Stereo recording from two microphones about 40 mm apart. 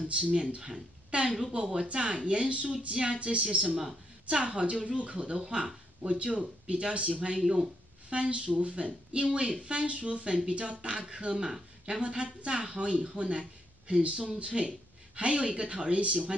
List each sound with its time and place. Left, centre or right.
0.1 s speech: centre
2.9 s speech: right